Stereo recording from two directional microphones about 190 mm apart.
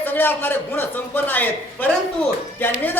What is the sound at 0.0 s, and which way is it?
A man's voice, 10° left (ahead or behind).